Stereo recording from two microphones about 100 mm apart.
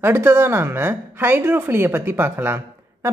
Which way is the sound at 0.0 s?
20° right (ahead or behind).